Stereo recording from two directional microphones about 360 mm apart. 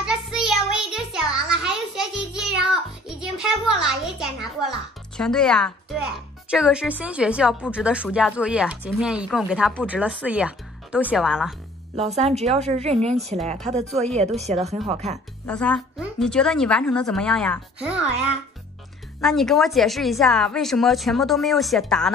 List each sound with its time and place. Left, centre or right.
0.0 s child singing: centre
6.5 s a woman's voice: centre
12.2 s a woman's voice: centre
15.4 s a woman's voice: centre
19.2 s a woman's voice: centre